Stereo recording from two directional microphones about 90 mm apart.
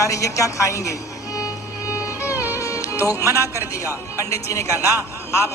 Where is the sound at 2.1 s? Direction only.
20° right (ahead or behind).